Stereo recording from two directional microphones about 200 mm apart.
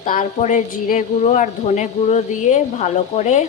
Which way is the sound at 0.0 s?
40° left (ahead or behind).